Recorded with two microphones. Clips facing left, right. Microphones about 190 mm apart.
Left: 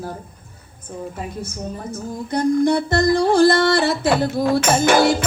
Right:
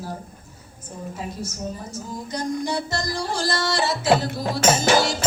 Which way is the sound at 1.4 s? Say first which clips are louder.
Left 2 dB; 55° left (ahead or behind).